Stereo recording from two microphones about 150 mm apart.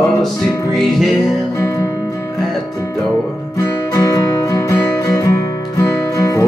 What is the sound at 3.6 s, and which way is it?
Music, 25° left (ahead or behind).